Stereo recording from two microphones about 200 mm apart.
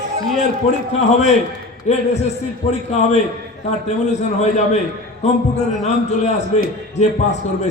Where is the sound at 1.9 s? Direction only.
35° left (ahead or behind).